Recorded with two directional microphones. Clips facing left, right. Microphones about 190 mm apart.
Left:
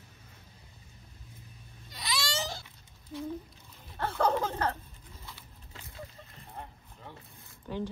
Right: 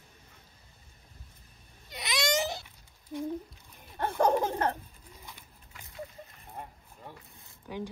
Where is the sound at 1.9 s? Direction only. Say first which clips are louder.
Right 5 dB; 20° right (ahead or behind).